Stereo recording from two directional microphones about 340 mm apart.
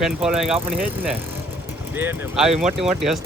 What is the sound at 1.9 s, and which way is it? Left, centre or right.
Speech, centre.